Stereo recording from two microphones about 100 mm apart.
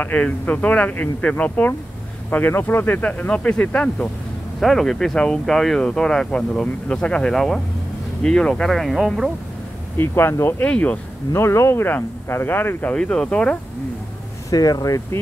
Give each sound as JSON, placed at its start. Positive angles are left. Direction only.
{"t": 0.0, "sound": "speech", "side_deg": 15}
{"t": 4.6, "sound": "speech", "side_deg": 0}
{"t": 9.9, "sound": "speech", "side_deg": 25}
{"t": 10.6, "sound": "speech", "side_deg": 15}
{"t": 11.3, "sound": "speech", "side_deg": 25}
{"t": 12.9, "sound": "speech", "side_deg": 10}
{"t": 14.5, "sound": "speech", "side_deg": 35}